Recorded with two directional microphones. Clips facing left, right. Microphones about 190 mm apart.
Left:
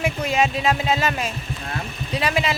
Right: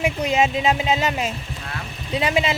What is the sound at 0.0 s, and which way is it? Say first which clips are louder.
Speech: right 1 dB; 20° right (ahead or behind).